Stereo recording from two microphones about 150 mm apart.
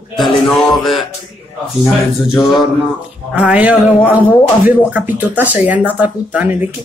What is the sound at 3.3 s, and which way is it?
Speech, 10° right (ahead or behind).